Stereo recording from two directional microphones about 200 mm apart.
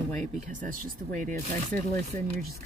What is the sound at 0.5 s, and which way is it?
Speech, 40° right (ahead or behind).